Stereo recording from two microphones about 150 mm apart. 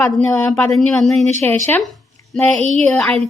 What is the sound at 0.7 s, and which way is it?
Speech, centre (ahead or behind).